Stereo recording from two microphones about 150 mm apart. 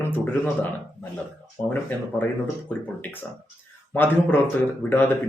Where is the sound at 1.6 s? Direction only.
20° left (ahead or behind).